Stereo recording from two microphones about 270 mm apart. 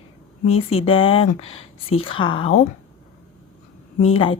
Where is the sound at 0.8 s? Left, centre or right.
Centre.